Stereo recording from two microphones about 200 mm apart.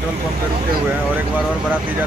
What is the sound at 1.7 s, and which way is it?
Speech, 10° right (ahead or behind).